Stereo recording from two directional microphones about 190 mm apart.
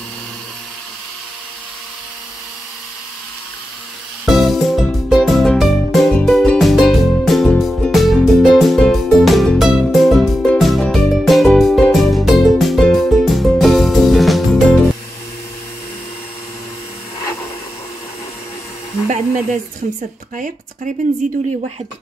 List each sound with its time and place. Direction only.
4.3 s music: centre (ahead or behind)
19.0 s a sound: 40° right (ahead or behind)
20.3 s speech: 40° right (ahead or behind)